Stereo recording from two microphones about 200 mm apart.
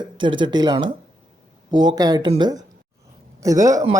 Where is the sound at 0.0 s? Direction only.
25° right (ahead or behind).